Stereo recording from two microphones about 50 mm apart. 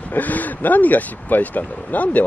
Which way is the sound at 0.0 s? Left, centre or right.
Left.